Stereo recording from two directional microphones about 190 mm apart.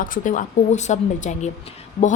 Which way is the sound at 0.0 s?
45° left (ahead or behind).